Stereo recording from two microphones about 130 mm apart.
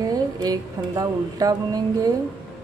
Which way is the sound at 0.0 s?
30° right (ahead or behind).